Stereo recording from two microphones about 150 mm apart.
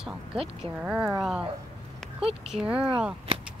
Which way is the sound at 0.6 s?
5° right (ahead or behind).